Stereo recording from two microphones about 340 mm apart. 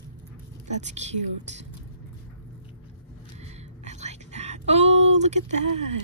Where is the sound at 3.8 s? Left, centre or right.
Centre.